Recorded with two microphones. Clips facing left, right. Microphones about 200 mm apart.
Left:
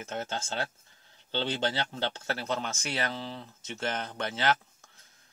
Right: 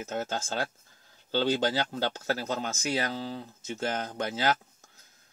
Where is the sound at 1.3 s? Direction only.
40° right (ahead or behind).